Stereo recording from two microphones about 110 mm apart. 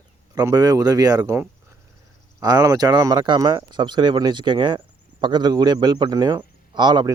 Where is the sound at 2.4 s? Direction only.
35° right (ahead or behind).